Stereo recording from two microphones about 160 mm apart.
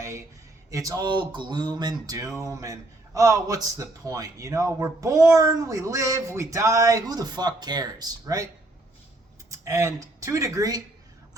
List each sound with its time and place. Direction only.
0.0 s speech: 20° right (ahead or behind)
9.5 s speech: 20° right (ahead or behind)